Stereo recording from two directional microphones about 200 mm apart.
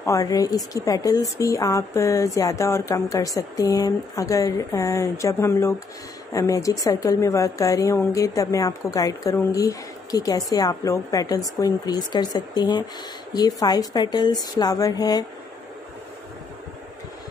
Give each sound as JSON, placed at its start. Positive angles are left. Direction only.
{"t": 0.0, "sound": "a woman's voice", "side_deg": 15}